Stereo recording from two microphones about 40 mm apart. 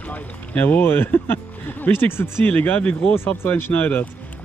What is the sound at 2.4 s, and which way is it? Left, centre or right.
Speech, left.